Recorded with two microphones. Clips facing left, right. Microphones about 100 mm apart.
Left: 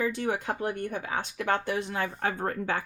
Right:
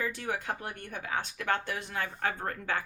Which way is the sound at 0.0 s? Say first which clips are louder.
Left 5 dB; 20° left (ahead or behind).